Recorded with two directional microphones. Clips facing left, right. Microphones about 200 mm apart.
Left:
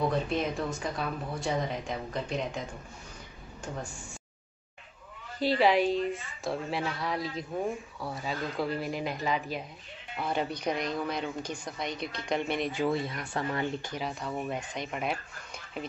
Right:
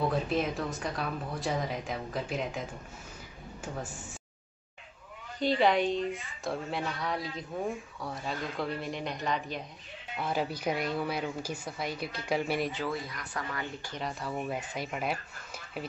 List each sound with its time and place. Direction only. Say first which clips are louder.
0.1 s a woman's voice: even; centre (ahead or behind)
5.4 s a woman's voice: left 1 dB; 5° left (ahead or behind)
12.8 s speech: left 6 dB; 25° left (ahead or behind)
13.9 s a woman's voice: left 1 dB; centre (ahead or behind)